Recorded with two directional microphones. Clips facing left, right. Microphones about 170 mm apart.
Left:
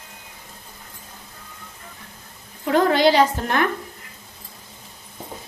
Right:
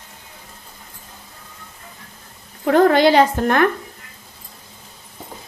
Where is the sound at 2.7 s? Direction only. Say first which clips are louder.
Right 4 dB; 55° right (ahead or behind).